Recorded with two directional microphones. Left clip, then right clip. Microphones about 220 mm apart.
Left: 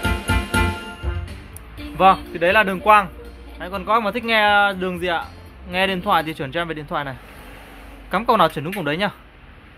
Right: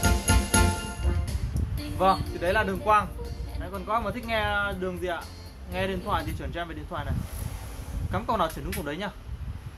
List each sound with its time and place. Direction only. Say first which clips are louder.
0.0 s music: left 4 dB; centre (ahead or behind)
2.0 s speech: left 9 dB; 45° left (ahead or behind)